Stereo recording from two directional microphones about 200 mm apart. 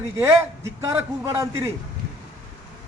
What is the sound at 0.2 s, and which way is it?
A man's voice, 15° right (ahead or behind).